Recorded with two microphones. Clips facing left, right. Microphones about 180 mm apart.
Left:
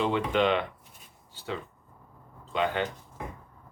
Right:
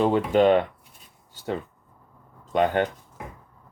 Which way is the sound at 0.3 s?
45° right (ahead or behind).